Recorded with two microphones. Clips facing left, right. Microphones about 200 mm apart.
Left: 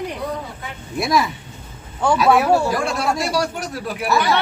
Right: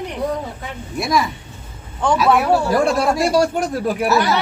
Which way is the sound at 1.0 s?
Centre (ahead or behind).